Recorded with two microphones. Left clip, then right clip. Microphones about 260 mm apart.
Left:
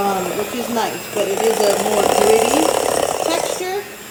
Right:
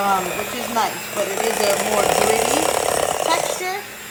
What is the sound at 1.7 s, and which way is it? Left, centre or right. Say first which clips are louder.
Speech: left 2 dB; centre.